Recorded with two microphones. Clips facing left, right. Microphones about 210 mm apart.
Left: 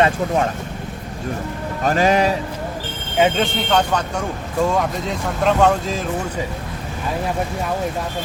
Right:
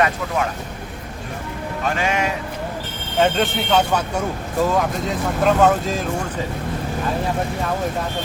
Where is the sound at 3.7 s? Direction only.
5° right (ahead or behind).